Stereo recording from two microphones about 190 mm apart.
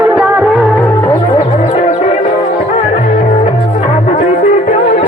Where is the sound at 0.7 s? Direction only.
10° left (ahead or behind).